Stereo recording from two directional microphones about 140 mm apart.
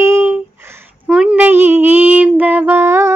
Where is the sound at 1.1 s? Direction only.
5° right (ahead or behind).